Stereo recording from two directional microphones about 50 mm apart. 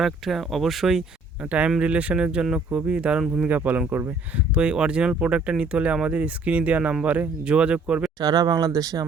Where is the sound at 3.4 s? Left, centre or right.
Right.